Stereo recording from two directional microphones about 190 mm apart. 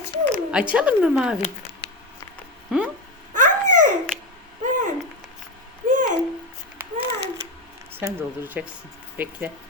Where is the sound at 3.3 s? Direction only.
45° right (ahead or behind).